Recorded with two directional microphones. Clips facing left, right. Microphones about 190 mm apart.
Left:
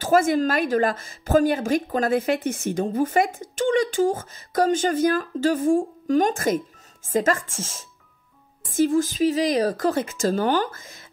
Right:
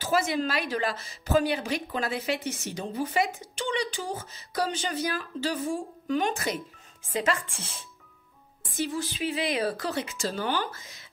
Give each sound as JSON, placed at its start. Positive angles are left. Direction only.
{"t": 0.0, "sound": "a woman's voice", "side_deg": 50}